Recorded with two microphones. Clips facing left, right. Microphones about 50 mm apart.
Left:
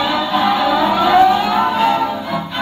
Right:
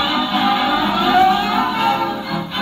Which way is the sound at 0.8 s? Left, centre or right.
Centre.